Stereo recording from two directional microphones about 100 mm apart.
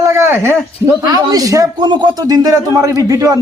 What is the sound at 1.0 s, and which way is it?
Speech, 35° right (ahead or behind).